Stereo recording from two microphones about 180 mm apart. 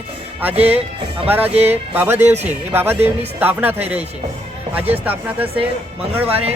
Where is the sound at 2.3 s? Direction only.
40° right (ahead or behind).